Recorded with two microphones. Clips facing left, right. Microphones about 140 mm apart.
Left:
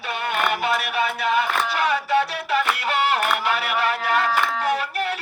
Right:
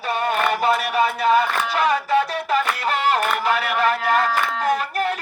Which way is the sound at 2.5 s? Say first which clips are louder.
Right 1 dB; 40° right (ahead or behind).